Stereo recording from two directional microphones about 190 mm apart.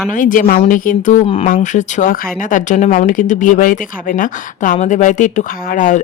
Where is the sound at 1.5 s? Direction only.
45° left (ahead or behind).